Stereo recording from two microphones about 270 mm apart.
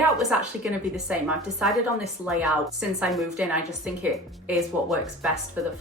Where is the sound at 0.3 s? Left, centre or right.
Centre.